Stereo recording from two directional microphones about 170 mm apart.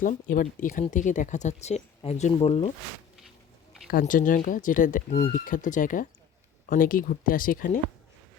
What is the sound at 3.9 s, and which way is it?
Speech, 55° left (ahead or behind).